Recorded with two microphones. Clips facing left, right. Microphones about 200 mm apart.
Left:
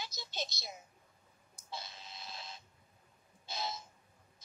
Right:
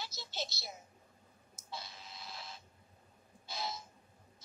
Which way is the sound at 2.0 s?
20° left (ahead or behind).